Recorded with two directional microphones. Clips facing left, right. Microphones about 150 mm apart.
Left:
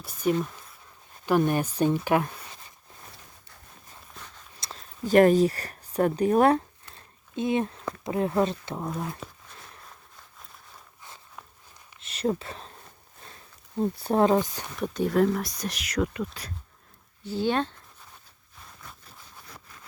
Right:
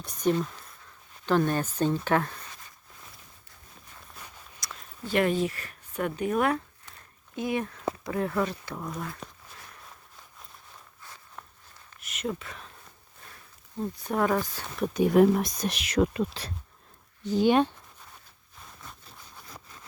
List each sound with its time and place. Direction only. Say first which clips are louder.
0.0 s speech: even; 5° left (ahead or behind)
4.6 s a sound: left 1 dB; 25° left (ahead or behind)
5.0 s speech: left 7 dB; 40° left (ahead or behind)
6.9 s a sound: left 3 dB; 25° left (ahead or behind)
8.0 s speech: left 5 dB; 20° left (ahead or behind)
11.9 s a sound: left 6 dB; 30° left (ahead or behind)
13.2 s speech: left 2 dB; 30° left (ahead or behind)
14.9 s speech: right 3 dB; 15° right (ahead or behind)
17.2 s speech: right 4 dB; 15° right (ahead or behind)